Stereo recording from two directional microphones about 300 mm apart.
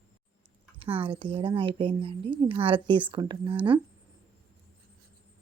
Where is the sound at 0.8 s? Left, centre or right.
Centre.